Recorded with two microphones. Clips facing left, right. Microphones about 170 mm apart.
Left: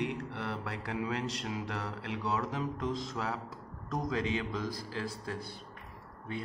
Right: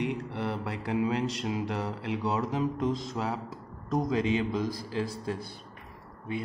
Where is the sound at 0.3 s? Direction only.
15° right (ahead or behind).